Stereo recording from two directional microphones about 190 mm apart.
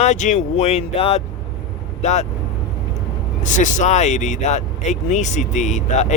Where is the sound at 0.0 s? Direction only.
40° left (ahead or behind).